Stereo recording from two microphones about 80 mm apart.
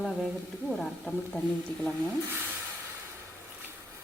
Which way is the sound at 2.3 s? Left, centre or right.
Right.